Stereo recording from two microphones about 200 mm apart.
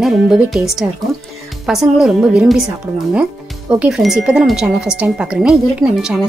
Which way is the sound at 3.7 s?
5° right (ahead or behind).